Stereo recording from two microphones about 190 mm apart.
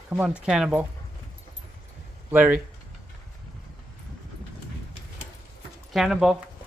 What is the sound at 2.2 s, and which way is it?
Speech, 10° right (ahead or behind).